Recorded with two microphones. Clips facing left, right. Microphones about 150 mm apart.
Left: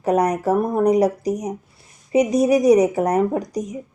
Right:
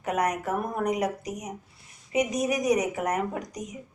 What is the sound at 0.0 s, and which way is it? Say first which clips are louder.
Speech: left 9 dB; 35° left (ahead or behind).